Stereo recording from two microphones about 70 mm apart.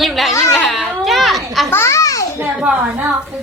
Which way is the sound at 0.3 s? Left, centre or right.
Left.